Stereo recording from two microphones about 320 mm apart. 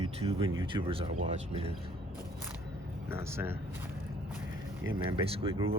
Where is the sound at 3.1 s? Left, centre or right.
Centre.